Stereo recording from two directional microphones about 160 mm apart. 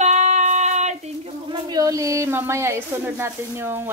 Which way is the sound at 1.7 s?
20° right (ahead or behind).